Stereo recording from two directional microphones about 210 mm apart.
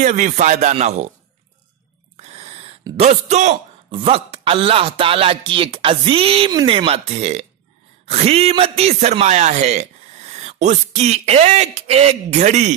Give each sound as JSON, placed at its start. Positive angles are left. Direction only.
{"t": 0.0, "sound": "a man's voice", "side_deg": -35}
{"t": 2.1, "sound": "owl", "side_deg": -30}
{"t": 3.0, "sound": "a man's voice", "side_deg": -30}